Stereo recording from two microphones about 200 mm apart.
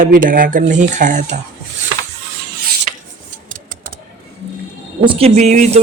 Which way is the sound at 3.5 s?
45° right (ahead or behind).